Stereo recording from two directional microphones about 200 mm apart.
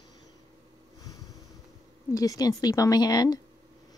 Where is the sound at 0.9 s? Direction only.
20° left (ahead or behind).